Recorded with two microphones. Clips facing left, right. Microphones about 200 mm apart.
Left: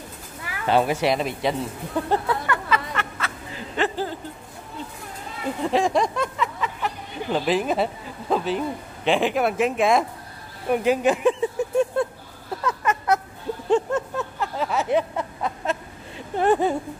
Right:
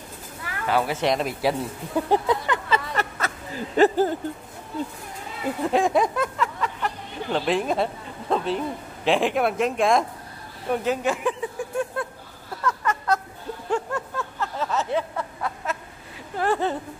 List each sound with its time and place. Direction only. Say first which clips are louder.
0.7 s speech: left 3 dB; 25° left (ahead or behind)
1.0 s speech: even; centre (ahead or behind); by 2.8 s 20° right (ahead or behind)
2.9 s a sound: right 2 dB; 40° right (ahead or behind)
5.6 s speech: even; centre (ahead or behind)
11.2 s a sound: left 6 dB; 25° left (ahead or behind)
16.3 s speech: left 4 dB; 15° left (ahead or behind)